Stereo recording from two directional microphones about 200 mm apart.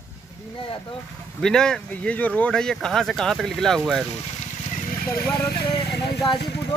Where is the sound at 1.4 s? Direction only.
5° left (ahead or behind).